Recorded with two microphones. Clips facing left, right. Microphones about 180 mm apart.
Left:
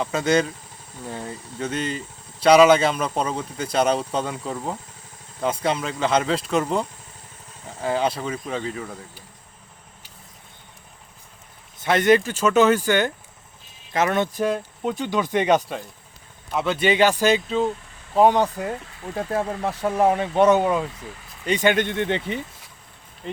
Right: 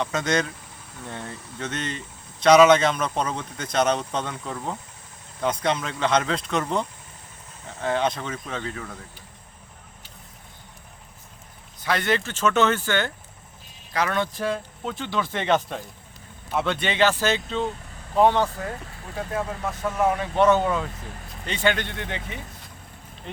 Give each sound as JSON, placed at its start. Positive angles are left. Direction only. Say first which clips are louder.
{"t": 0.0, "sound": "speech", "louder": "left 4 dB", "side_deg": 5}
{"t": 11.8, "sound": "speech", "louder": "left 7 dB", "side_deg": 20}
{"t": 16.5, "sound": "speech", "louder": "left 4 dB", "side_deg": 0}
{"t": 19.3, "sound": "speech", "louder": "left 4 dB", "side_deg": 35}
{"t": 20.3, "sound": "speech", "louder": "left 1 dB", "side_deg": 15}